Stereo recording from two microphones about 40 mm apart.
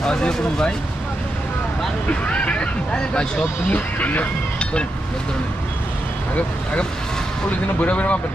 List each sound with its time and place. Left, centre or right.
0.0 s speech: centre
2.0 s speech: left
3.7 s speech: left
7.8 s speech: left